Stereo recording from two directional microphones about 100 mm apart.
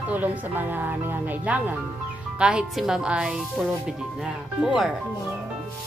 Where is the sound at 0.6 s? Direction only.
20° right (ahead or behind).